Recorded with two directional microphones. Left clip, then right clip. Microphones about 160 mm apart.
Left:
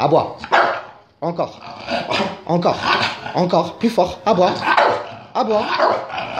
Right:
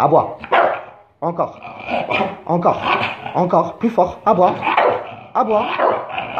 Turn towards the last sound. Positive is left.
turn(degrees=20)  # may be behind; listen again after turning